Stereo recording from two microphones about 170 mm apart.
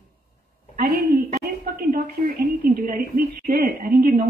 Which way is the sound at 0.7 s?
65° right (ahead or behind).